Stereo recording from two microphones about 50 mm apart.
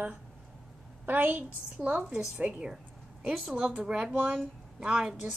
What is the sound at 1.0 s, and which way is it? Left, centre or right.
A woman's voice, right.